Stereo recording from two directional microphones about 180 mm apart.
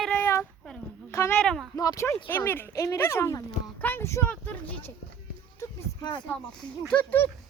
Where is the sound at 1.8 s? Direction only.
20° left (ahead or behind).